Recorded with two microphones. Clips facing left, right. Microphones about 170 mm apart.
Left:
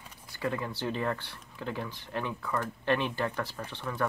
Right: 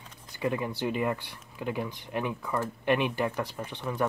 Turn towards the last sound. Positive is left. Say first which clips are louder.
# right 3 dB
turn(degrees=-15)  # may be behind; listen again after turning